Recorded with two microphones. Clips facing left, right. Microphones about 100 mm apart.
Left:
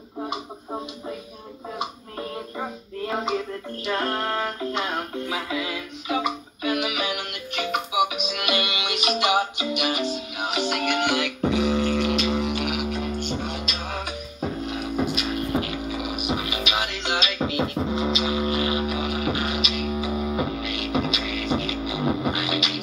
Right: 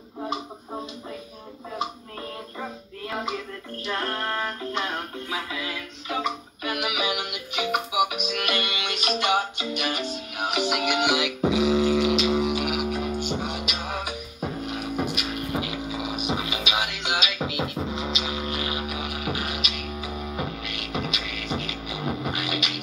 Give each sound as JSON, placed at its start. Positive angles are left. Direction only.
{"t": 3.8, "sound": "music", "side_deg": 20}
{"t": 6.6, "sound": "music", "side_deg": -5}